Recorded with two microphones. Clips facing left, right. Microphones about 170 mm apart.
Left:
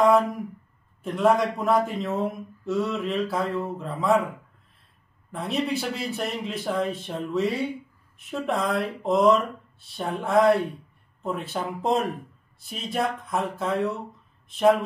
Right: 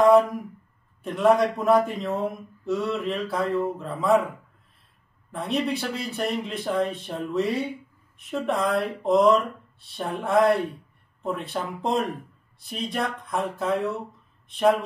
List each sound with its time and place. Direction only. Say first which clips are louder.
0.0 s a sound: right 3 dB; centre (ahead or behind)
1.0 s speech: right 1 dB; centre (ahead or behind)
5.3 s speech: even; centre (ahead or behind)